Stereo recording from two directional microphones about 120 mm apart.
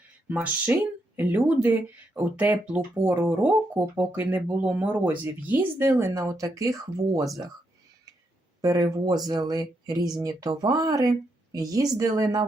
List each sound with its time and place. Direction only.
0.3 s speech: 10° right (ahead or behind)
4.2 s speech: 15° right (ahead or behind)
8.6 s speech: 30° right (ahead or behind)